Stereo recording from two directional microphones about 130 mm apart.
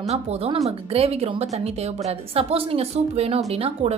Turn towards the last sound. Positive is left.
turn(degrees=-50)  # may be behind; listen again after turning